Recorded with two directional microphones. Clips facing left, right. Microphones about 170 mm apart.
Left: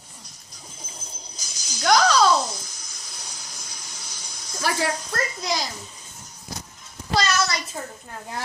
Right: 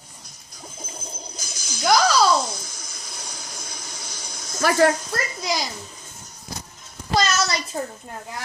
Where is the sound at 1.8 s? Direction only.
5° right (ahead or behind).